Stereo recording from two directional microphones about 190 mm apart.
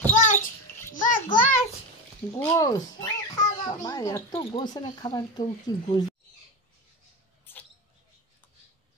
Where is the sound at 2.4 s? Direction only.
20° left (ahead or behind).